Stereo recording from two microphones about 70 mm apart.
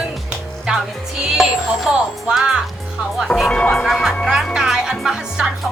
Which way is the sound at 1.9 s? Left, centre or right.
Centre.